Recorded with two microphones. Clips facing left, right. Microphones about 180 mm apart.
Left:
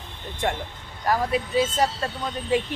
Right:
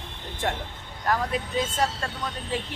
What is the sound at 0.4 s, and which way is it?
Speech, centre (ahead or behind).